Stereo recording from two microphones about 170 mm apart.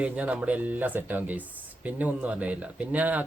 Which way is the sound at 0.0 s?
5° right (ahead or behind).